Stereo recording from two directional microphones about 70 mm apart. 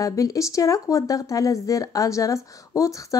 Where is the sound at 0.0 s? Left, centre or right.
Left.